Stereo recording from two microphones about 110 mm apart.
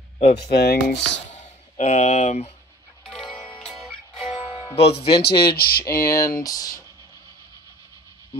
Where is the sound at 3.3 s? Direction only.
50° left (ahead or behind).